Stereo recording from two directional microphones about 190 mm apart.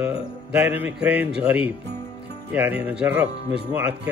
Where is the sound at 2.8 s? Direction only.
10° right (ahead or behind).